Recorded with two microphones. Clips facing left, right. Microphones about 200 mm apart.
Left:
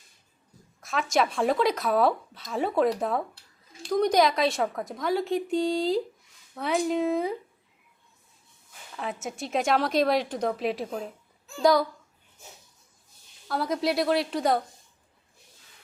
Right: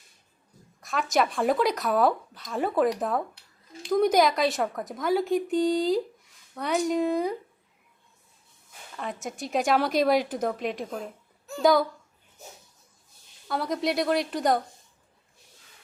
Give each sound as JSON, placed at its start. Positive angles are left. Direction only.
{"t": 0.8, "sound": "speech", "side_deg": 0}
{"t": 9.2, "sound": "speech", "side_deg": 0}
{"t": 13.5, "sound": "speech", "side_deg": 0}